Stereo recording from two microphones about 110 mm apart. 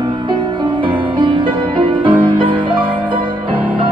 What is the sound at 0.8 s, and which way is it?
Music, 45° right (ahead or behind).